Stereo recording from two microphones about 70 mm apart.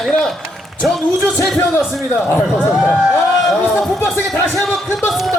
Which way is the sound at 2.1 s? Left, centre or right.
Left.